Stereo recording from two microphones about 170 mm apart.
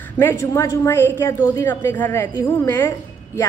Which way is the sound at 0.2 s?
15° left (ahead or behind).